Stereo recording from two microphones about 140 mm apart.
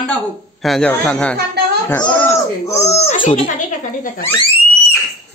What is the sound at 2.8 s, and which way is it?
Speech, 50° left (ahead or behind).